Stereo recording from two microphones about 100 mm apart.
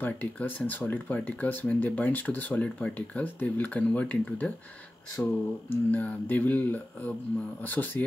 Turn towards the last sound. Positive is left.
turn(degrees=20)  # may be behind; listen again after turning